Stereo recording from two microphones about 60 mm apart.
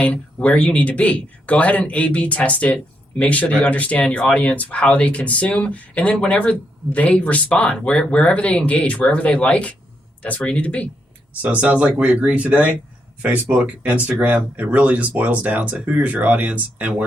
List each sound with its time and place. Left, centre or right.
0.0 s speech: left
11.4 s speech: right